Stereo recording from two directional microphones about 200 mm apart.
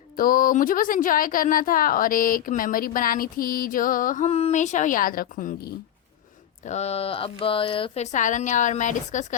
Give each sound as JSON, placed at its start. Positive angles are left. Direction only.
{"t": 0.2, "sound": "speech", "side_deg": 45}
{"t": 6.7, "sound": "speech", "side_deg": 30}